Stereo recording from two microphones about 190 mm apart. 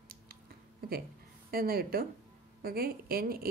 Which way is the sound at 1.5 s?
50° right (ahead or behind).